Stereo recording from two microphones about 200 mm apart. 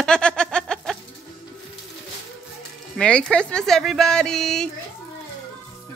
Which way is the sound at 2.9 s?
5° left (ahead or behind).